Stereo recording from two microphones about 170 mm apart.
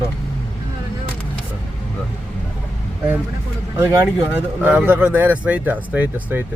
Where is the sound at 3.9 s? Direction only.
15° right (ahead or behind).